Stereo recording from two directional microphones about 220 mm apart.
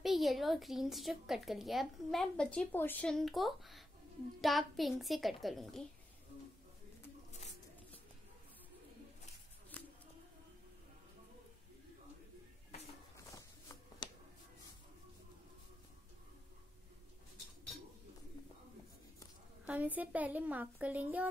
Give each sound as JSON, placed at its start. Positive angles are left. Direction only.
{"t": 0.0, "sound": "a woman's voice", "side_deg": 0}
{"t": 9.7, "sound": "bird", "side_deg": 5}
{"t": 13.3, "sound": "a sound", "side_deg": 20}
{"t": 19.6, "sound": "a child's voice", "side_deg": -5}